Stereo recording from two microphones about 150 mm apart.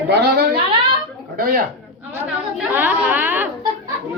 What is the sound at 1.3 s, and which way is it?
Speech, 70° right (ahead or behind).